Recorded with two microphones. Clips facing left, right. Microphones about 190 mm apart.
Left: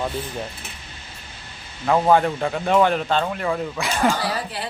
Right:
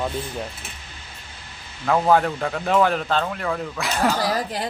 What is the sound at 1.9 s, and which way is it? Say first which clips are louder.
Speech: left 1 dB; 5° left (ahead or behind).